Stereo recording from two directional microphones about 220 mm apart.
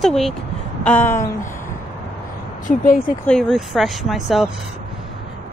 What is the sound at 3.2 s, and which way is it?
Speech, 5° left (ahead or behind).